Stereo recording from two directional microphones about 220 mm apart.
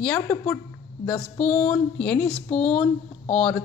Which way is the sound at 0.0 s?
10° left (ahead or behind).